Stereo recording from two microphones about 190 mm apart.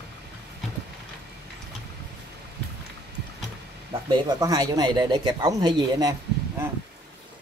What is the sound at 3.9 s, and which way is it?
Speech, 20° right (ahead or behind).